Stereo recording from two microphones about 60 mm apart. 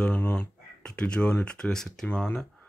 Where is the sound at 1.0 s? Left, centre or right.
Centre.